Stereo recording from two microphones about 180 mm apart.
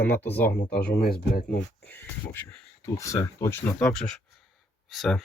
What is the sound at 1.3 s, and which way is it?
Speech, 50° left (ahead or behind).